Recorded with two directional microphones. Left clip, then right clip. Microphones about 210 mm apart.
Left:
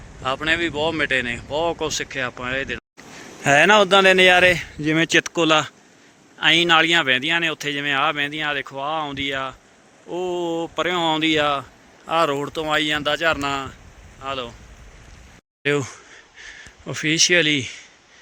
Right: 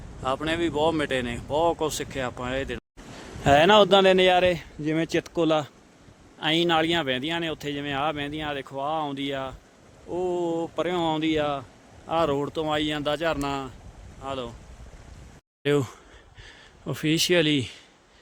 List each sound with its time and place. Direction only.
0.2 s speech: 10° right (ahead or behind)
15.6 s speech: 10° right (ahead or behind)